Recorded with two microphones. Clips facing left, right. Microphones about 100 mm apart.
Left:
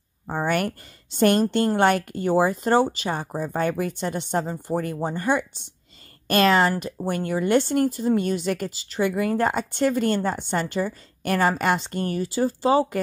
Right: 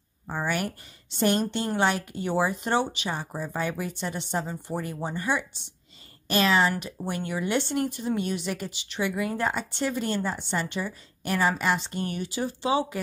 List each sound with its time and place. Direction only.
1.1 s a woman's voice: 50° left (ahead or behind)